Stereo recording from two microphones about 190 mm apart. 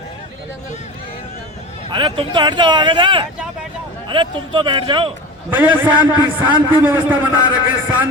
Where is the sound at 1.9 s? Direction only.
25° right (ahead or behind).